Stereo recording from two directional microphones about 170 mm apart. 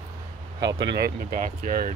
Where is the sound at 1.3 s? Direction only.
45° right (ahead or behind).